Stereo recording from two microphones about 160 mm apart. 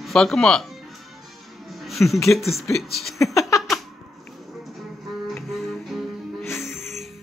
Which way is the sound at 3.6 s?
Centre (ahead or behind).